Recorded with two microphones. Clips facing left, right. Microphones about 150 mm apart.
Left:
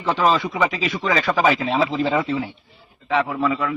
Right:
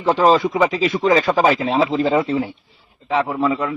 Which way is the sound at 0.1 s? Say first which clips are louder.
Right 5 dB; 40° right (ahead or behind).